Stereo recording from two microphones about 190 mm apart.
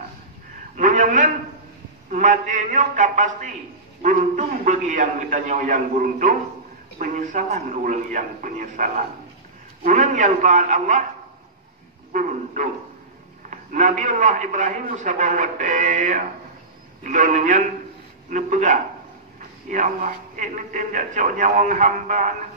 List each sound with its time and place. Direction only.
0.7 s a man's voice: 40° right (ahead or behind)
12.1 s a man's voice: 40° right (ahead or behind)